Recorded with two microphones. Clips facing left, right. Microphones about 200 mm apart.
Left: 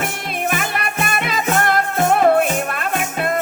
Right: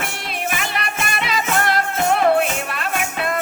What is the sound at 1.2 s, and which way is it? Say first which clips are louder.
Music: left 1 dB; 50° left (ahead or behind).